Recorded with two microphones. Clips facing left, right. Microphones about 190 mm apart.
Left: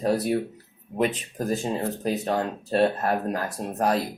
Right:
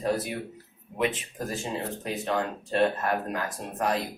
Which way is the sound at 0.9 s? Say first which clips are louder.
Left 3 dB; 40° left (ahead or behind).